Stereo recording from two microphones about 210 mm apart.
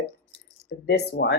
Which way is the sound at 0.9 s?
50° left (ahead or behind).